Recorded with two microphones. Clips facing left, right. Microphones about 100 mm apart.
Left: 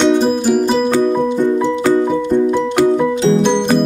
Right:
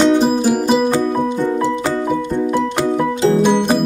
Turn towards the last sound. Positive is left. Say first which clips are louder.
# even
turn(degrees=-5)  # may be behind; listen again after turning